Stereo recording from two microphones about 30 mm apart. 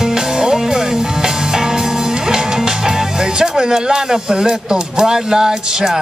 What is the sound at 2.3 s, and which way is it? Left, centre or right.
Speech, centre.